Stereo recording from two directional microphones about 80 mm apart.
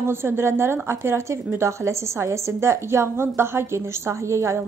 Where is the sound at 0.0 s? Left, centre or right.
Right.